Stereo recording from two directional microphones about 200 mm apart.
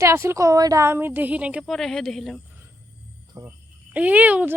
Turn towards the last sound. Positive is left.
turn(degrees=-5)  # may be behind; listen again after turning